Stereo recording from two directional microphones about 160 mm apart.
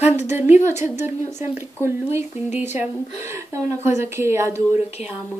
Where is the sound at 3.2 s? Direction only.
20° right (ahead or behind).